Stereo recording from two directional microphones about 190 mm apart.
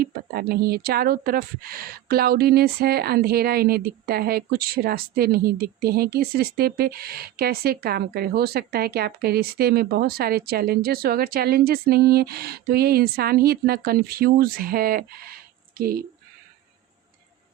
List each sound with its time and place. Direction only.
0.0 s a woman's voice: 55° right (ahead or behind)